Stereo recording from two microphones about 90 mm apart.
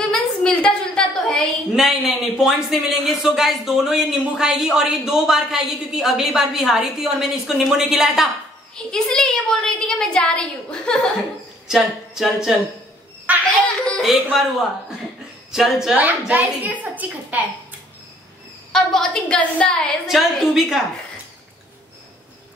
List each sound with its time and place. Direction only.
0.1 s a sound: 10° left (ahead or behind)
1.7 s speech: 5° right (ahead or behind)
8.7 s a woman's voice: 10° left (ahead or behind)
11.6 s a sound: 5° right (ahead or behind)
13.4 s a sound: 15° left (ahead or behind)
14.0 s speech: centre (ahead or behind)
15.5 s speech: 5° right (ahead or behind)
16.0 s a woman's voice: 20° right (ahead or behind)
18.7 s a woman's voice: 5° left (ahead or behind)
20.1 s speech: 5° right (ahead or behind)